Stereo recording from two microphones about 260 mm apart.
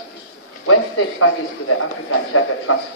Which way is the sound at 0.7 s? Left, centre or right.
Left.